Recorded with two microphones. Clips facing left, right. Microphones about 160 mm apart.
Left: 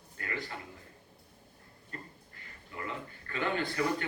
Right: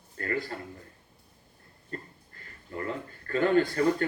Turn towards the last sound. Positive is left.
turn(degrees=-45)  # may be behind; listen again after turning